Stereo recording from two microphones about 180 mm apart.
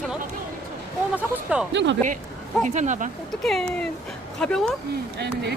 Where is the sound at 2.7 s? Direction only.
40° right (ahead or behind).